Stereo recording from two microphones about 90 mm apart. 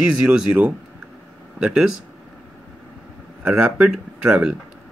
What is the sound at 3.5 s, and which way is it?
Speech, 5° right (ahead or behind).